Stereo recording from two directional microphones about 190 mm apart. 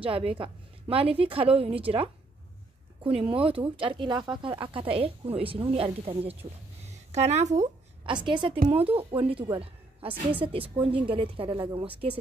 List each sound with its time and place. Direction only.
0.0 s a woman's voice: 30° right (ahead or behind)
8.0 s a woman's voice: 25° right (ahead or behind)